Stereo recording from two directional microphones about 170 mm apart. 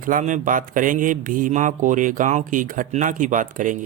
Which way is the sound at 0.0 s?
50° right (ahead or behind).